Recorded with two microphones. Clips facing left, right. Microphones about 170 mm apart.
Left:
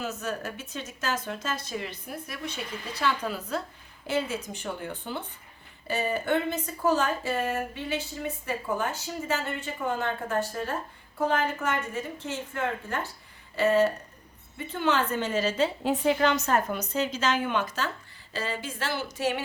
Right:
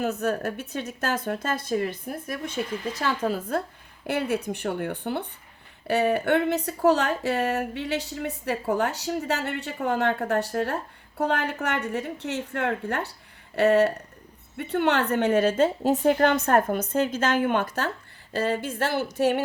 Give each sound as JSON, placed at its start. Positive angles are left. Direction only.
{"t": 0.0, "sound": "speech", "side_deg": -60}
{"t": 4.0, "sound": "a woman's voice", "side_deg": -60}